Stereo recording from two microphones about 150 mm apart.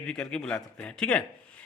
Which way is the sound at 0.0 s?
5° left (ahead or behind).